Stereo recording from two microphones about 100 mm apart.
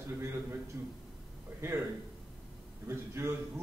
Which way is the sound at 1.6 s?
25° right (ahead or behind).